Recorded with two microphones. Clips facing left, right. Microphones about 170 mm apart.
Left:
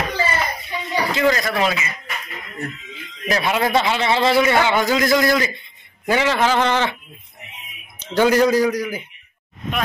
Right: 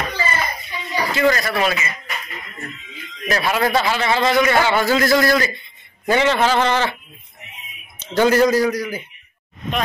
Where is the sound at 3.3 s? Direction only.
20° left (ahead or behind).